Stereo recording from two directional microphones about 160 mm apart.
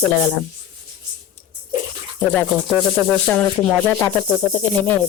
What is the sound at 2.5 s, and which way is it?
Speech, 5° left (ahead or behind).